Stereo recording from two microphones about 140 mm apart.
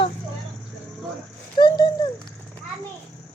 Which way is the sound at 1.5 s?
30° left (ahead or behind).